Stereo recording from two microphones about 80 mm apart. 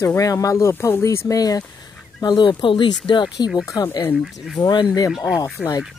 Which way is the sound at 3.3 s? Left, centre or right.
Left.